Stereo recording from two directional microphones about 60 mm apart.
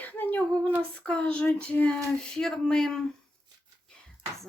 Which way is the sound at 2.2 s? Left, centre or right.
Centre.